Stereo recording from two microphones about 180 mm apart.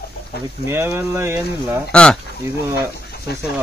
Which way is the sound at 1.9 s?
5° left (ahead or behind).